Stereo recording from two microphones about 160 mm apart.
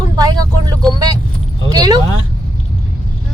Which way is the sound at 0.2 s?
25° right (ahead or behind).